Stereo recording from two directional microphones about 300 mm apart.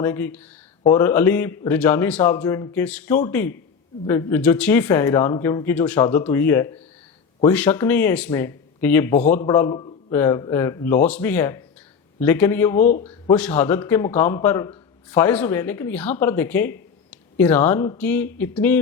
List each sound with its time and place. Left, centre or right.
0.0 s speech: centre
12.8 s a man's voice: left
13.3 s speech: centre